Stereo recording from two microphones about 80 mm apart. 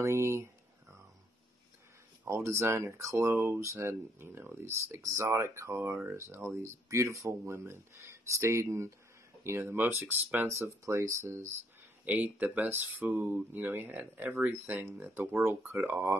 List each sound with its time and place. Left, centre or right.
0.0 s speech: right
2.2 s speech: right
12.0 s speech: right